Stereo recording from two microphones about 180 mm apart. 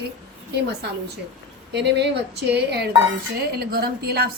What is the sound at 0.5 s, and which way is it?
A woman's voice, 65° right (ahead or behind).